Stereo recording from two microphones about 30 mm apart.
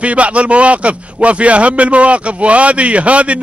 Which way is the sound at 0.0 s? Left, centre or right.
Right.